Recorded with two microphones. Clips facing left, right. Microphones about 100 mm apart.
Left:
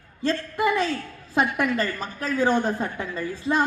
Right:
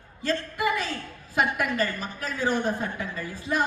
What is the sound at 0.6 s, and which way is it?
Speech, 25° left (ahead or behind).